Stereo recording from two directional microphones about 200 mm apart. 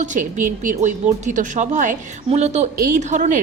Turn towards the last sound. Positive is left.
turn(degrees=-40)  # may be behind; listen again after turning